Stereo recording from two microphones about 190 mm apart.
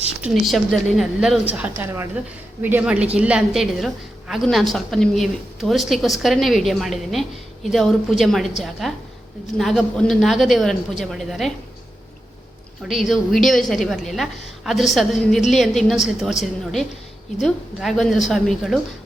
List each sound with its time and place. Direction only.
0.2 s a woman's voice: centre (ahead or behind)
12.9 s a woman's voice: centre (ahead or behind)